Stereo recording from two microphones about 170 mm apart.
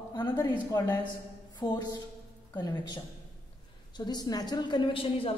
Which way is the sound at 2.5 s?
25° left (ahead or behind).